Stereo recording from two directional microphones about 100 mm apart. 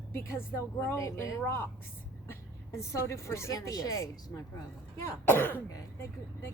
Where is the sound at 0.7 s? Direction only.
30° left (ahead or behind).